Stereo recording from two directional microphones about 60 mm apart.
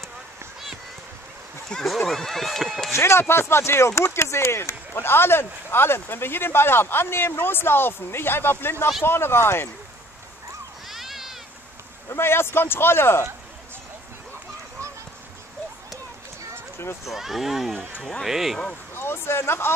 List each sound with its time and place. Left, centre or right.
1.7 s speech: centre
3.0 s speech: left
10.9 s cat: centre
12.1 s speech: left
17.1 s speech: centre
18.9 s speech: left